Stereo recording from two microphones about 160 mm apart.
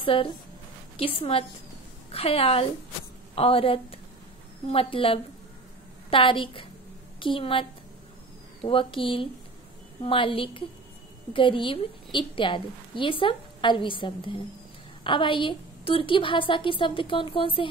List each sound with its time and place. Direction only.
0.0 s a woman's voice: 35° left (ahead or behind)
8.6 s a woman's voice: 35° left (ahead or behind)